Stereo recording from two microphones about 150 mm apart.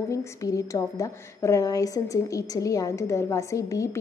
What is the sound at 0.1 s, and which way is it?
A woman's voice, 20° left (ahead or behind).